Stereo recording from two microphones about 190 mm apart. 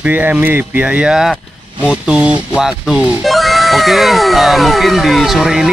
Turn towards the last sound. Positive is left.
turn(degrees=0)  # may be behind; listen again after turning